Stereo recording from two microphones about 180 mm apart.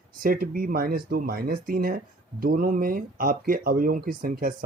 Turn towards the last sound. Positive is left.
turn(degrees=-55)  # may be behind; listen again after turning